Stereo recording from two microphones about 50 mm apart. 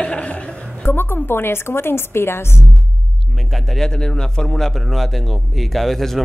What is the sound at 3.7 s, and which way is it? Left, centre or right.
Speech, centre.